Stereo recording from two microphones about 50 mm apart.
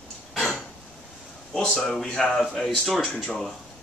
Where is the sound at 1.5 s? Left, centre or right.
Centre.